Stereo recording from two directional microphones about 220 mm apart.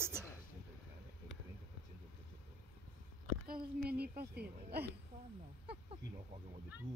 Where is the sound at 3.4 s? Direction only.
40° right (ahead or behind).